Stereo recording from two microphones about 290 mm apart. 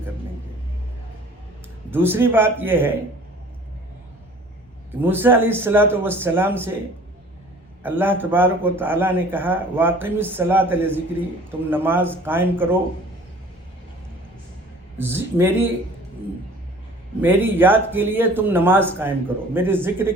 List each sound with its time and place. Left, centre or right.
1.9 s a man's voice: centre
4.9 s a man's voice: centre
7.9 s a man's voice: centre
14.9 s a man's voice: centre
17.2 s a man's voice: centre